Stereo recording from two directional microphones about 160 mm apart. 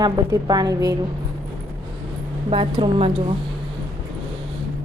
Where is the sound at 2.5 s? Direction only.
35° right (ahead or behind).